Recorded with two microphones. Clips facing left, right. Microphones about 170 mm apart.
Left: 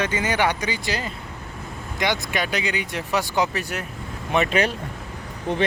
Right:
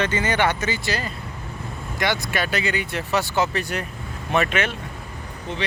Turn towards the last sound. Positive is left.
turn(degrees=55)  # may be behind; listen again after turning